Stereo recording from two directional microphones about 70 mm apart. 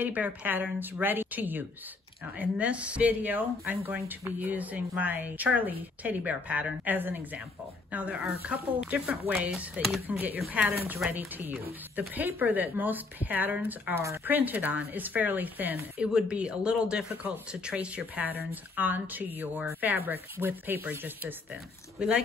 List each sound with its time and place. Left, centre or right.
0.0 s speech: right
16.0 s speech: centre; by 21.4 s right
22.0 s speech: centre